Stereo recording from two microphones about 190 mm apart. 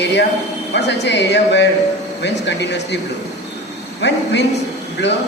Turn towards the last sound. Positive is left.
turn(degrees=65)  # may be behind; listen again after turning